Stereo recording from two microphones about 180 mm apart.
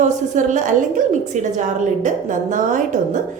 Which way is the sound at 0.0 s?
45° right (ahead or behind).